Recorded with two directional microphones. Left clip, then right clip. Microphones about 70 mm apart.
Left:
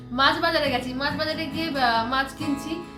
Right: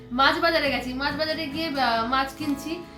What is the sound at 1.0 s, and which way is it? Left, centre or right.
A woman's voice, left.